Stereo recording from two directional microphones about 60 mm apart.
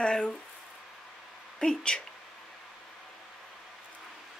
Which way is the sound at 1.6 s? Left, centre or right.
Centre.